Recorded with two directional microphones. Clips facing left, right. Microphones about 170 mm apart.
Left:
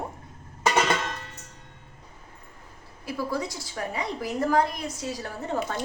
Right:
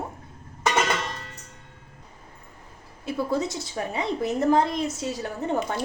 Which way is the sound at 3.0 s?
25° right (ahead or behind).